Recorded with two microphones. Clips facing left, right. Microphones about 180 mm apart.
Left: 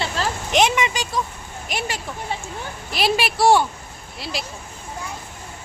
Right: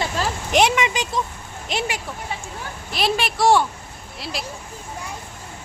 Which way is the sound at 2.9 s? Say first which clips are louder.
Left 1 dB; 5° left (ahead or behind).